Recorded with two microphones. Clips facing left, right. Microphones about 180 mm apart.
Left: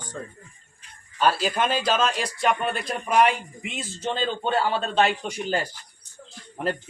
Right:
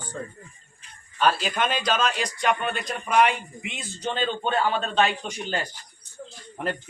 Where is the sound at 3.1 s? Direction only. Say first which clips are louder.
Left 1 dB; 40° left (ahead or behind).